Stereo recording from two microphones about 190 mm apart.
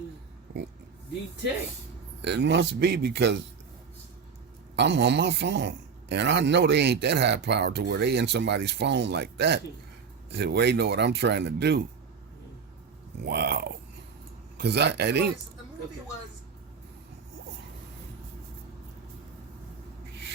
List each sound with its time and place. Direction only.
2.2 s a man's voice: 65° right (ahead or behind)
4.8 s a man's voice: 65° right (ahead or behind)
13.2 s a man's voice: 60° right (ahead or behind)